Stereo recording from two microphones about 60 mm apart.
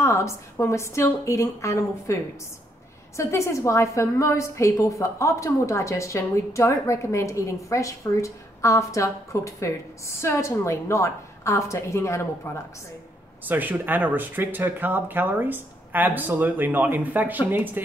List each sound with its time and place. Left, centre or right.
0.0 s a woman's voice: left
3.2 s a woman's voice: left
13.5 s speech: right